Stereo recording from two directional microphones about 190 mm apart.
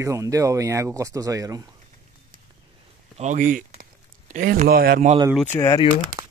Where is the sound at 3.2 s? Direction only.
40° right (ahead or behind).